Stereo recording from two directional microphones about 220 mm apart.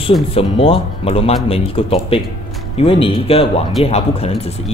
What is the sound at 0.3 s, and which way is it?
Speech, 25° left (ahead or behind).